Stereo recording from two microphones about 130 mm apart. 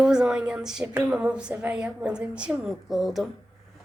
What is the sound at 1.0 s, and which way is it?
Female singing, 10° right (ahead or behind).